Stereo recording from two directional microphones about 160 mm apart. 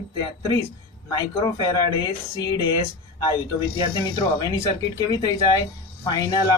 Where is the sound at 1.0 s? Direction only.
25° left (ahead or behind).